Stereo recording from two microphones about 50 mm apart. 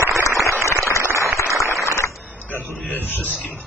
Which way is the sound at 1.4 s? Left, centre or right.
Left.